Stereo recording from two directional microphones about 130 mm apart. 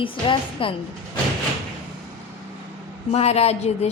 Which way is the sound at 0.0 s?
40° left (ahead or behind).